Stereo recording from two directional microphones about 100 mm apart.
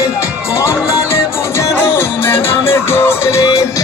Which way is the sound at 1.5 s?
25° left (ahead or behind).